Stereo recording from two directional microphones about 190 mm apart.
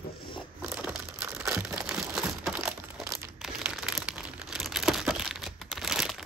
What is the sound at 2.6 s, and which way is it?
Crumpling, 15° right (ahead or behind).